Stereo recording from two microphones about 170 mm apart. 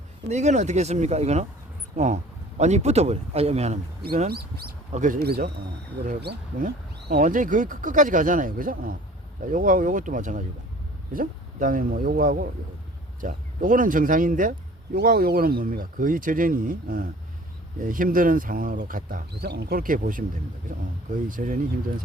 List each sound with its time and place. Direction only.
0.3 s speech: 40° right (ahead or behind)
2.6 s speech: 40° right (ahead or behind)
4.3 s speech: 65° right (ahead or behind)
4.9 s speech: 50° right (ahead or behind)
5.2 s speech: 65° right (ahead or behind)
7.1 s speech: 50° right (ahead or behind)